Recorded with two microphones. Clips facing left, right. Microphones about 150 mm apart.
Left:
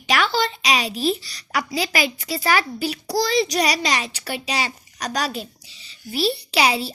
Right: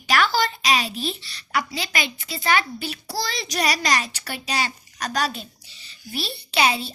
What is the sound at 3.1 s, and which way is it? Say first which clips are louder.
A child's voice: left 9 dB; 35° left (ahead or behind).